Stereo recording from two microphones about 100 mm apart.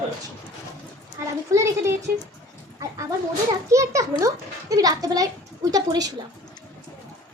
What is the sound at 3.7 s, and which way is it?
A child's voice, 30° right (ahead or behind).